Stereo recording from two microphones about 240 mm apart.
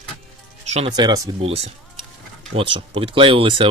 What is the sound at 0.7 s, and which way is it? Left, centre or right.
Speech, right.